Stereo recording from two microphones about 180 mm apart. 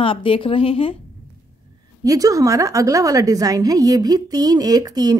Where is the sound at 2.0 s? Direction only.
20° right (ahead or behind).